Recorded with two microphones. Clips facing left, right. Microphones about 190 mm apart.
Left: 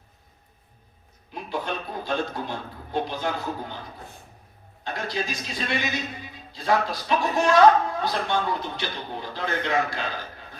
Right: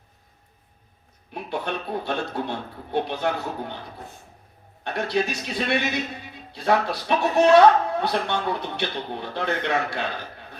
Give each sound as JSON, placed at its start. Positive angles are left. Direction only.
{"t": 1.3, "sound": "a man's voice", "side_deg": -65}
{"t": 4.8, "sound": "a man's voice", "side_deg": -65}